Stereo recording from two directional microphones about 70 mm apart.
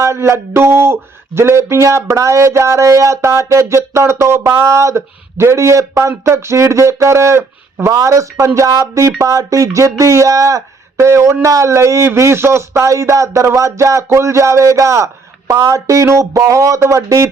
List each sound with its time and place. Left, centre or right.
0.0 s speech: right
4.7 s speech: right
10.9 s speech: right